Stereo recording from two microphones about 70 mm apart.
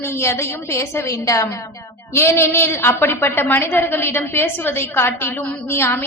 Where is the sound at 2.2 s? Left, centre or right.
Left.